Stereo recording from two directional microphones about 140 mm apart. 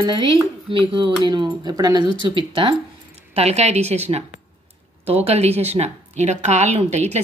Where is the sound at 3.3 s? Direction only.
50° right (ahead or behind).